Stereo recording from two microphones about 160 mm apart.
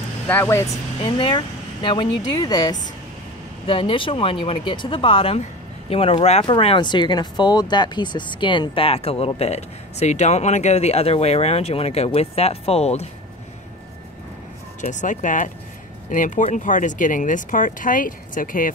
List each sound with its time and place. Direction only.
0.3 s speech: 15° left (ahead or behind)
1.0 s speech: 30° left (ahead or behind)
14.8 s speech: 50° left (ahead or behind)